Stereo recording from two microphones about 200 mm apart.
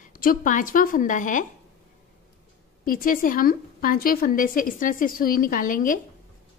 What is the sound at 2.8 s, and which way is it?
A woman's voice, 45° left (ahead or behind).